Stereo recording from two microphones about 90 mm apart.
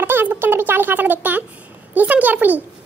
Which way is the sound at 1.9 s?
20° right (ahead or behind).